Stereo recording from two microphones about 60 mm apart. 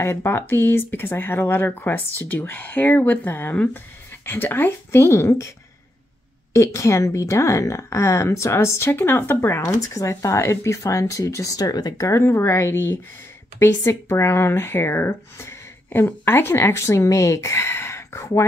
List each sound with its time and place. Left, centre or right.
0.0 s speech: left
6.5 s speech: left
9.8 s speech: left
12.1 s speech: left